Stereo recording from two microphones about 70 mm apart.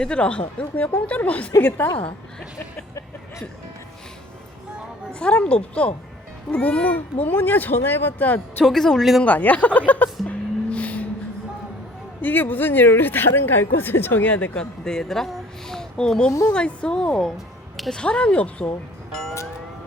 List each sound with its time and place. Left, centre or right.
0.0 s speech: centre
5.2 s a woman's voice: centre
8.6 s speech: centre
9.2 s speech: left
10.2 s vehicle: centre
12.2 s a woman's voice: left; by 17.3 s centre
17.3 s music: centre
17.9 s a woman's voice: centre